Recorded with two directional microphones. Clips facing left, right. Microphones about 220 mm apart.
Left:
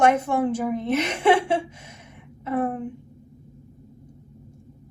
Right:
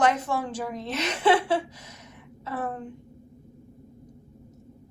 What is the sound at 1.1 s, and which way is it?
A woman's voice, 25° left (ahead or behind).